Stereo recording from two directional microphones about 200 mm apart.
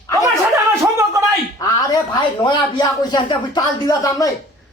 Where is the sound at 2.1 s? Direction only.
20° left (ahead or behind).